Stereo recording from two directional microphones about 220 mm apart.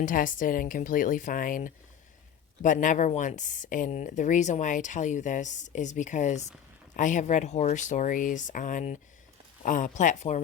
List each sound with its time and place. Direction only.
0.0 s speech: 35° left (ahead or behind)